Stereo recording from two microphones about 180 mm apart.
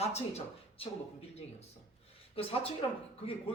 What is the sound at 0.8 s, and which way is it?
Speech, 30° left (ahead or behind).